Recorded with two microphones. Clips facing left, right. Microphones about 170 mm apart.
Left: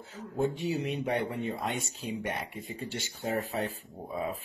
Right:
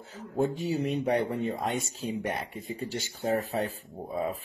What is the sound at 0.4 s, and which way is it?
Speech, 40° right (ahead or behind).